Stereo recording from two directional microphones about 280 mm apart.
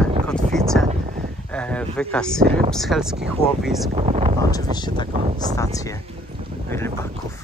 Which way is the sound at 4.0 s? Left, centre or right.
Right.